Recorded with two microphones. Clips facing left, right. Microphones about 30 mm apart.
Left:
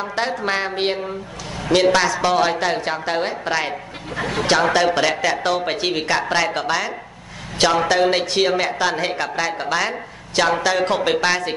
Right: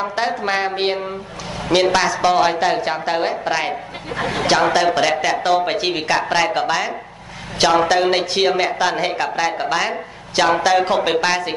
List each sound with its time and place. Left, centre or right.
0.0 s a woman's voice: centre
4.1 s speech: right
4.5 s a woman's voice: centre